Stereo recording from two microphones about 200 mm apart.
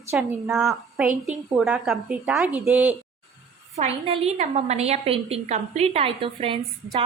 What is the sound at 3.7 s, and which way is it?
A woman's voice, 30° right (ahead or behind).